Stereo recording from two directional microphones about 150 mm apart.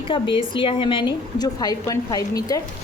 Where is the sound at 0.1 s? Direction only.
35° left (ahead or behind).